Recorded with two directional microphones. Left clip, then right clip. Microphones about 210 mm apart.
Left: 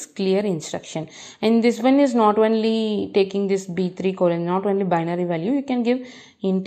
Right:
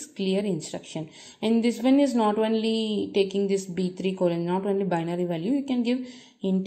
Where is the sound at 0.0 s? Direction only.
15° left (ahead or behind).